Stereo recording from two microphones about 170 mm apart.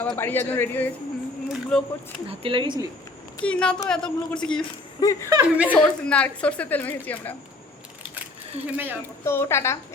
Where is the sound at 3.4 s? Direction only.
5° left (ahead or behind).